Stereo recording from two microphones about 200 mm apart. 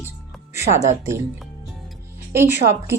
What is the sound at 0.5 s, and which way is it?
Speech, 15° right (ahead or behind).